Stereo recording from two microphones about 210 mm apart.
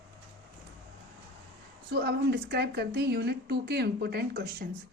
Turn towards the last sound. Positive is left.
turn(degrees=-50)  # may be behind; listen again after turning